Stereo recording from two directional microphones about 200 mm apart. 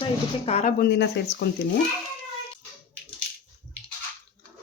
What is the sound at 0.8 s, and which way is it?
Speech, 55° left (ahead or behind).